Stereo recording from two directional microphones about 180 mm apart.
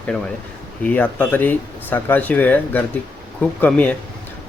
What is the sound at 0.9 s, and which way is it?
Speech, 10° left (ahead or behind).